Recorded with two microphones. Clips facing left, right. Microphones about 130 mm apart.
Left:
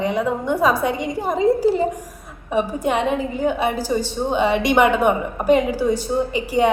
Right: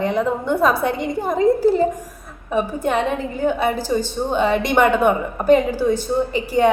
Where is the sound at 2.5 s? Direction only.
15° left (ahead or behind).